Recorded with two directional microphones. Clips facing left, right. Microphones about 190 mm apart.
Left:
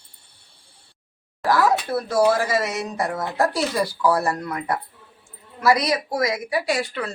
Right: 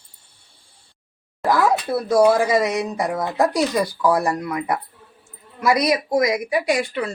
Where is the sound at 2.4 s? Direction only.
20° right (ahead or behind).